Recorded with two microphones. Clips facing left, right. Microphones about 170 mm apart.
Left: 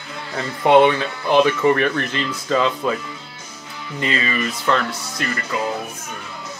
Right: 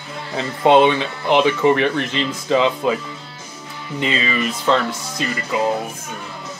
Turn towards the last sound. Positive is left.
turn(degrees=-15)  # may be behind; listen again after turning